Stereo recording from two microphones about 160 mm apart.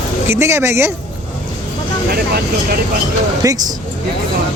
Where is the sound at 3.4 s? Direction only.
20° right (ahead or behind).